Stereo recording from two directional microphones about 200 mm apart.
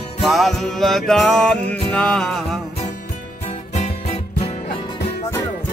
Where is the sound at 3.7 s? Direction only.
35° left (ahead or behind).